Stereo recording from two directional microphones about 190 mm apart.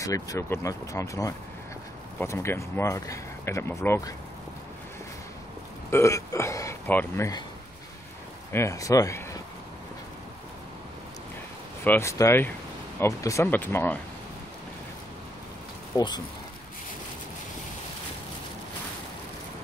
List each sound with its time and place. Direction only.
0.0 s speech: 15° left (ahead or behind)
5.9 s speech: 15° left (ahead or behind)
8.5 s speech: 15° left (ahead or behind)
11.8 s speech: 10° left (ahead or behind)